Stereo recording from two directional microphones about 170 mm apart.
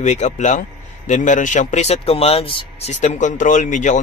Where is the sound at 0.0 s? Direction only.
45° left (ahead or behind).